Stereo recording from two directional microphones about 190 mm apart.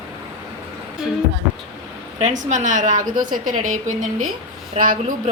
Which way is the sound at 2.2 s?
40° right (ahead or behind).